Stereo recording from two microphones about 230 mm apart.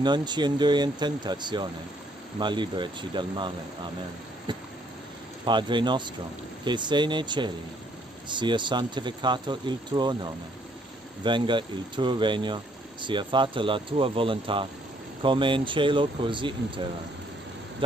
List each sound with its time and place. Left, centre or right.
0.0 s speech: centre
4.5 s a sound: centre
5.4 s speech: centre